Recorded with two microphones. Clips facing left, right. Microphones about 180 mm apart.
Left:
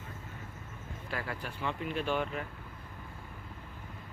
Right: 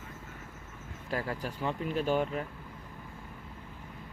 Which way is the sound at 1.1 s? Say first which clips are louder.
Right 5 dB; 40° right (ahead or behind).